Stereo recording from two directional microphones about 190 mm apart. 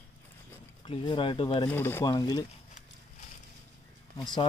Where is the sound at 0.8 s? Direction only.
25° left (ahead or behind).